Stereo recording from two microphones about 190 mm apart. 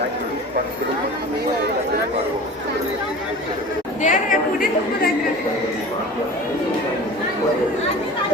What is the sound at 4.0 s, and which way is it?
Speech, 45° left (ahead or behind).